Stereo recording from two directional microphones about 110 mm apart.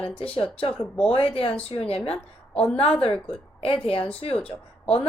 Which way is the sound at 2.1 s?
10° left (ahead or behind).